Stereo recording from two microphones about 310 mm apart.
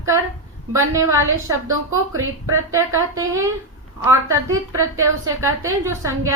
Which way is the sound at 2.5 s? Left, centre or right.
Centre.